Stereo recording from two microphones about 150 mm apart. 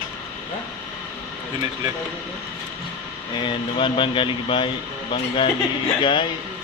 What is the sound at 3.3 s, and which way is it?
Speech, 35° left (ahead or behind).